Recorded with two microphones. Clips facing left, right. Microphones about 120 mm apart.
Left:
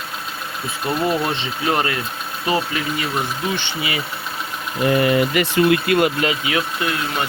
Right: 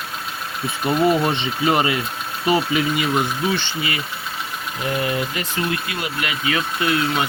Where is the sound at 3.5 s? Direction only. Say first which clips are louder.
Even; 20° left (ahead or behind).